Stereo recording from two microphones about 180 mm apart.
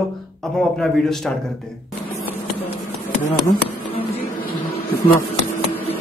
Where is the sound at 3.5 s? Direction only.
30° left (ahead or behind).